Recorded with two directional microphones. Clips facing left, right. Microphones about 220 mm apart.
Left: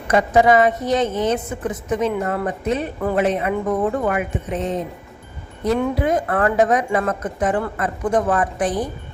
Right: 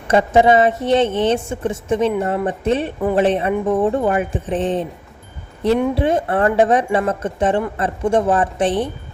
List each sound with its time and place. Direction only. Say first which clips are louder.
0.1 s a woman's voice: right 2 dB; 25° right (ahead or behind)
3.5 s speech: right 3 dB; 20° right (ahead or behind)
3.8 s speech: right 3 dB; 30° right (ahead or behind)
5.9 s a woman's voice: right 2 dB; 30° right (ahead or behind)